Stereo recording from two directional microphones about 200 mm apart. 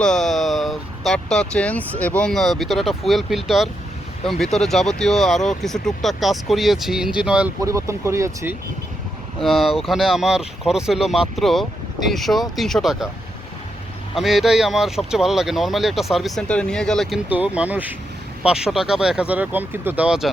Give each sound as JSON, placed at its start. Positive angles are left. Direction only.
{"t": 0.0, "sound": "vehicle", "side_deg": 0}
{"t": 2.0, "sound": "speech", "side_deg": 5}
{"t": 7.6, "sound": "speech", "side_deg": -15}
{"t": 9.4, "sound": "speech", "side_deg": 0}
{"t": 14.2, "sound": "speech", "side_deg": 0}